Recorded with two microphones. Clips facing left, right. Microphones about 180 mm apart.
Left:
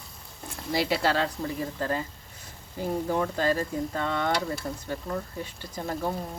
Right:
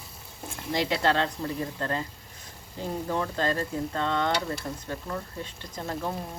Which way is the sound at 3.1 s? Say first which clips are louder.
Left 1 dB; 5° left (ahead or behind).